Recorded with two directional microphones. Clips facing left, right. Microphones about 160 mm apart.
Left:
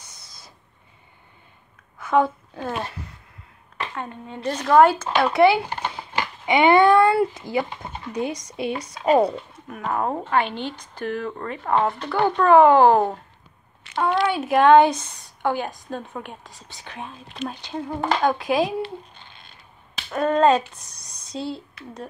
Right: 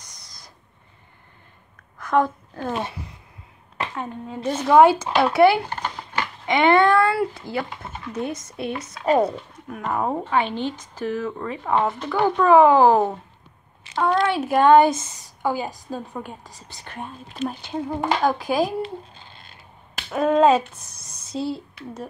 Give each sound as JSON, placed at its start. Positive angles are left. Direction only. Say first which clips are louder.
{"t": 0.0, "sound": "owl", "louder": "even", "side_deg": 5}
{"t": 2.0, "sound": "a woman's voice", "louder": "left 1 dB", "side_deg": 5}
{"t": 3.9, "sound": "speech", "louder": "right 2 dB", "side_deg": -5}
{"t": 5.8, "sound": "speech", "louder": "even", "side_deg": 15}
{"t": 9.3, "sound": "speech", "louder": "even", "side_deg": 0}
{"t": 20.0, "sound": "speech", "louder": "right 2 dB", "side_deg": -5}